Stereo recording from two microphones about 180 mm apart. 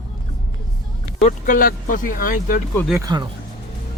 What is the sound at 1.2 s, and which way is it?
Speech, 45° left (ahead or behind).